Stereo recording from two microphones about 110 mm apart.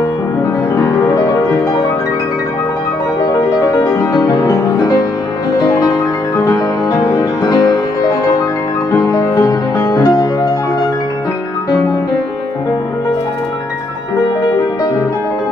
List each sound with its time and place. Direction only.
0.7 s music: 30° left (ahead or behind)
3.3 s music: 30° left (ahead or behind)
6.3 s music: 30° left (ahead or behind)